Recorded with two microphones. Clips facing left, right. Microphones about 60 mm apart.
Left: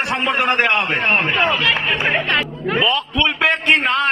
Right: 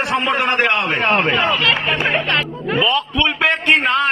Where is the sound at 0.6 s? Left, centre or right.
Centre.